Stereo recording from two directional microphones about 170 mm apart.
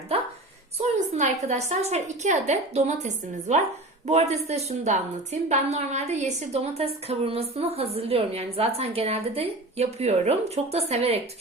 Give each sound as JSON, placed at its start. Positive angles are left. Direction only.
{"t": 0.8, "sound": "a woman's voice", "side_deg": -45}